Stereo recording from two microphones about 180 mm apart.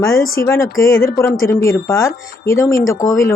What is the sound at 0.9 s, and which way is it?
Speech, 55° left (ahead or behind).